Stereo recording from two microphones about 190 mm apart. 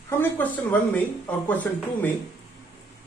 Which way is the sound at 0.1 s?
10° left (ahead or behind).